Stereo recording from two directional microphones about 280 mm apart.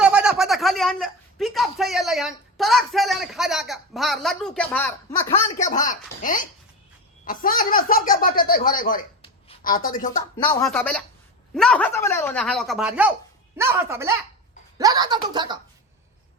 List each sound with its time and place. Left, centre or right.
0.0 s speech: centre
5.3 s speech: left
10.3 s speech: centre
10.7 s speech: centre